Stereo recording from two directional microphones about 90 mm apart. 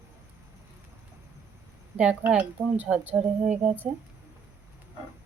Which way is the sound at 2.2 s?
20° right (ahead or behind).